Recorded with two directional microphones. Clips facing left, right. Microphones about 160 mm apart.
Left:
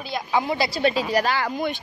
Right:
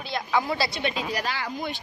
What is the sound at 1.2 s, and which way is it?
Speech, 60° left (ahead or behind).